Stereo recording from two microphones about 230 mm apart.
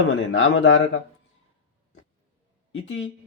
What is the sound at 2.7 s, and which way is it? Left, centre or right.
Speech, left.